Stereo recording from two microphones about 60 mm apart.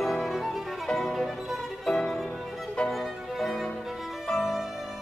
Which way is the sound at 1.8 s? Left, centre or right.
Centre.